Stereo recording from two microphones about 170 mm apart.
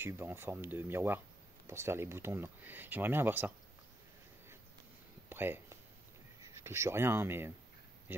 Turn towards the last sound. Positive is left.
turn(degrees=-15)  # may be behind; listen again after turning